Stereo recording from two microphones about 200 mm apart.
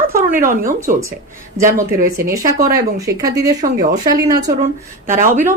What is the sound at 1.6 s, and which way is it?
Speech, 40° right (ahead or behind).